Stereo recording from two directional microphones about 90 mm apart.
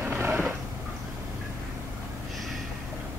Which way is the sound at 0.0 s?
20° right (ahead or behind).